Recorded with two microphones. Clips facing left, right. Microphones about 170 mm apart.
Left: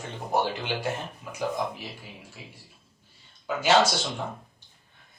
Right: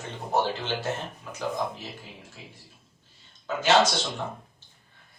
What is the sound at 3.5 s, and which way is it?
Speech, 10° left (ahead or behind).